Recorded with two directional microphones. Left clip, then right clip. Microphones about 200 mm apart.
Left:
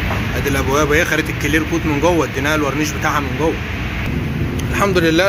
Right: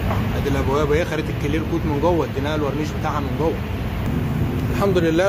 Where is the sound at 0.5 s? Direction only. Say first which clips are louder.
Left 5 dB; 5° left (ahead or behind).